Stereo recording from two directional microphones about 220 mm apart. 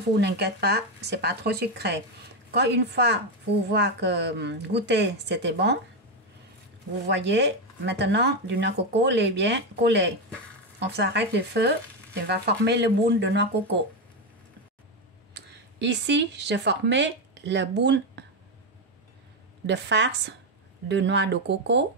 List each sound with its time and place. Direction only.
0.2 s speech: 50° right (ahead or behind)
7.1 s speech: 50° right (ahead or behind)
15.5 s speech: 50° right (ahead or behind)
19.6 s speech: 50° right (ahead or behind)